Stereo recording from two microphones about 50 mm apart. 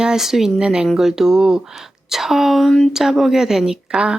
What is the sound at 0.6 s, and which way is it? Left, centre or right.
A woman's voice, centre.